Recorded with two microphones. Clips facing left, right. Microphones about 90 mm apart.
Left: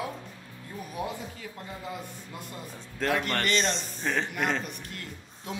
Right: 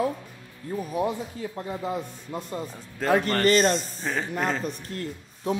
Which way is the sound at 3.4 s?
45° right (ahead or behind).